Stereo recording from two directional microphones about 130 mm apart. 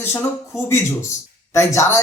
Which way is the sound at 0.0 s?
20° left (ahead or behind).